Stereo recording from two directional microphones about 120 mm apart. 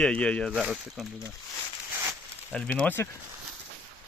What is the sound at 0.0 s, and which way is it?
Speech, 10° left (ahead or behind).